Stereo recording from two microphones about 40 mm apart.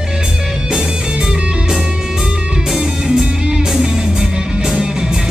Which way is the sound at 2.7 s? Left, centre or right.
Centre.